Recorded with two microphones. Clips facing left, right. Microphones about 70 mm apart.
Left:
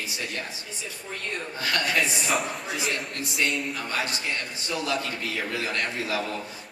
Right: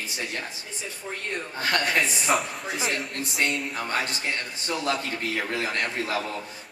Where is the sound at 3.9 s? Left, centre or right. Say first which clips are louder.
Right 3 dB; right.